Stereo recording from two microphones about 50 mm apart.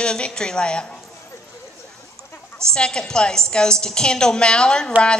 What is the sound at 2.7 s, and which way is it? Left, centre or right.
A woman's voice, centre.